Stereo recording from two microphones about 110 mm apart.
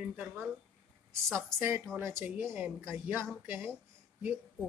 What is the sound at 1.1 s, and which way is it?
A woman's voice, 25° right (ahead or behind).